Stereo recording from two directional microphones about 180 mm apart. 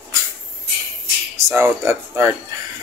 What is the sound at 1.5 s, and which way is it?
Speech, 15° right (ahead or behind).